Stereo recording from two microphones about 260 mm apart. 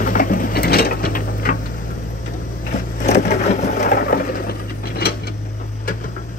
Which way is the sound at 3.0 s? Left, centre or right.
Left.